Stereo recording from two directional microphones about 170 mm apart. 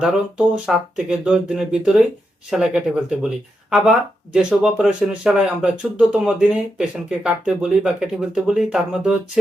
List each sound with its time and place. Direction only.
0.0 s speech: 5° right (ahead or behind)